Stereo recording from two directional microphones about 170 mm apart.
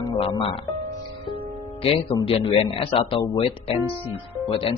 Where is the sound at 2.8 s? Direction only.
30° left (ahead or behind).